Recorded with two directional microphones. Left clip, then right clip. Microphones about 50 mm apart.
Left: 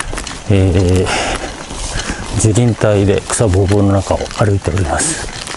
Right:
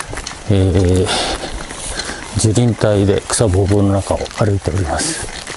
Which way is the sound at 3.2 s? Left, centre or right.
Centre.